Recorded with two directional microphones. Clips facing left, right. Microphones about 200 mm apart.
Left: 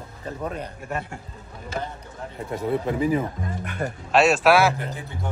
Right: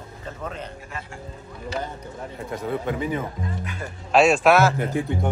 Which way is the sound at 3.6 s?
60° left (ahead or behind).